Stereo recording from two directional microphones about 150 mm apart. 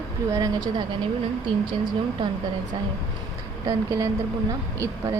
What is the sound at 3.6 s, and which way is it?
Speech, 20° right (ahead or behind).